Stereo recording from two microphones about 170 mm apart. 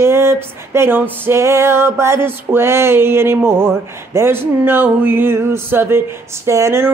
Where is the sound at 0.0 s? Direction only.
15° right (ahead or behind).